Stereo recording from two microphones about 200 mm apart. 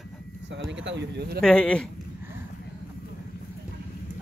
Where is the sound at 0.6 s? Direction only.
65° right (ahead or behind).